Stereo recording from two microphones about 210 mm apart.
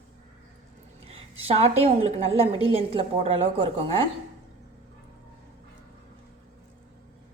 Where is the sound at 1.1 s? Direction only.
30° right (ahead or behind).